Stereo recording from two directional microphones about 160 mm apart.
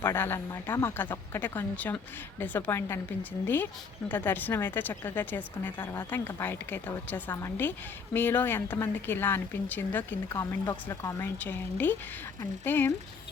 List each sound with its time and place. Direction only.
0.0 s a woman's voice: 15° left (ahead or behind)
5.7 s speech: 30° left (ahead or behind)
6.0 s a woman's voice: 15° left (ahead or behind)